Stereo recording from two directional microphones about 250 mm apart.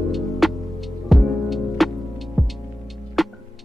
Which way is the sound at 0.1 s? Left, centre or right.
Centre.